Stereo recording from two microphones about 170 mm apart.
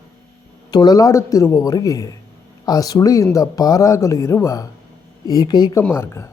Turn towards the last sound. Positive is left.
turn(degrees=15)  # may be behind; listen again after turning